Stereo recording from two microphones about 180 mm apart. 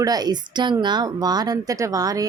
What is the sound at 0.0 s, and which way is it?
A woman's voice, 20° right (ahead or behind).